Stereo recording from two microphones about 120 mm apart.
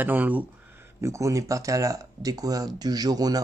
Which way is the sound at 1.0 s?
25° right (ahead or behind).